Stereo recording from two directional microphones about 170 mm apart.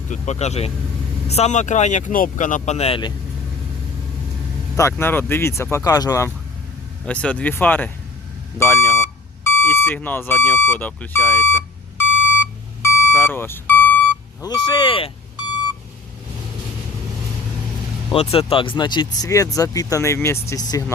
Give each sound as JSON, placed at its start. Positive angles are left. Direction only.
{"t": 0.1, "sound": "speech", "side_deg": 40}
{"t": 4.8, "sound": "speech", "side_deg": 15}
{"t": 7.0, "sound": "speech", "side_deg": 5}
{"t": 8.5, "sound": "beep", "side_deg": 15}
{"t": 9.6, "sound": "speech", "side_deg": 15}
{"t": 12.8, "sound": "beep", "side_deg": 15}
{"t": 14.4, "sound": "speech", "side_deg": 25}
{"t": 18.1, "sound": "speech", "side_deg": 35}